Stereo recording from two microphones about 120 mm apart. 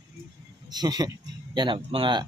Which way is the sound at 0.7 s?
35° right (ahead or behind).